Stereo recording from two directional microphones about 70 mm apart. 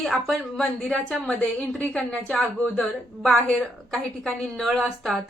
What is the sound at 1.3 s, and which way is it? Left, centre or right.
A woman's voice, centre.